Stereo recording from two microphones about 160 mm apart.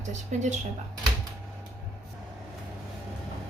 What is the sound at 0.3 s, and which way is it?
Speech, 50° right (ahead or behind).